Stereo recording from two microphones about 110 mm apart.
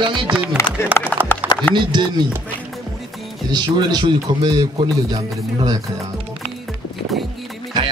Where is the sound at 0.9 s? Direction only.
20° left (ahead or behind).